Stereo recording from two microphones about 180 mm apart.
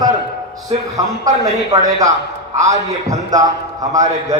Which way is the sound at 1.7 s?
15° right (ahead or behind).